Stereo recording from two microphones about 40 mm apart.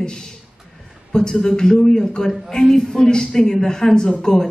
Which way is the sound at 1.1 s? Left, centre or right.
Centre.